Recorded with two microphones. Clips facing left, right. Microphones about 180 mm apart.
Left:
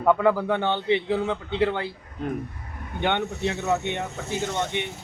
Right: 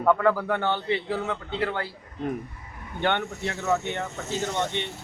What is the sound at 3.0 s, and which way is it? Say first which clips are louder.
Speech: left 2 dB; 20° left (ahead or behind).